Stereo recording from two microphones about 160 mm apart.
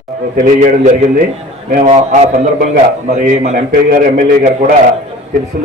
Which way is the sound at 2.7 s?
55° right (ahead or behind).